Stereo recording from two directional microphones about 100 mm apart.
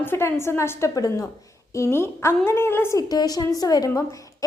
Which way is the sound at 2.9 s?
40° left (ahead or behind).